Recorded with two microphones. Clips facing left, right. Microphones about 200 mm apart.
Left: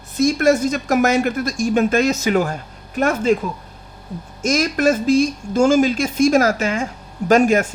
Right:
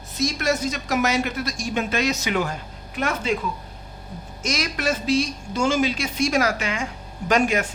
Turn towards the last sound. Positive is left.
turn(degrees=45)  # may be behind; listen again after turning